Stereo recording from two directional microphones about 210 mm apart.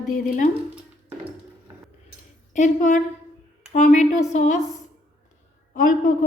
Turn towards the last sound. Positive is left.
turn(degrees=40)  # may be behind; listen again after turning